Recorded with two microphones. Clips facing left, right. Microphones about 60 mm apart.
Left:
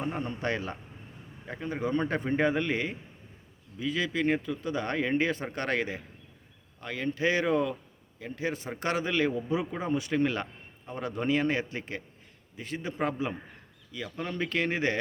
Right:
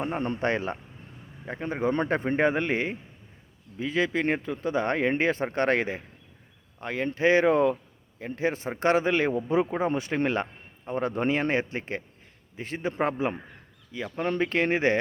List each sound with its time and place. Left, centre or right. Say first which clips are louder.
0.2 s a man's voice: right 5 dB; right